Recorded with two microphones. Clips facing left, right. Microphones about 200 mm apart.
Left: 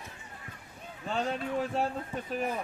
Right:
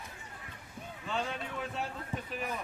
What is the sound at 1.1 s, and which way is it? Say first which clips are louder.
Speech: left 5 dB; 40° left (ahead or behind).